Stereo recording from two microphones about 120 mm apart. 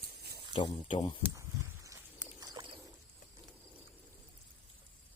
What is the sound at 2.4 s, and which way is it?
Bird, 35° right (ahead or behind).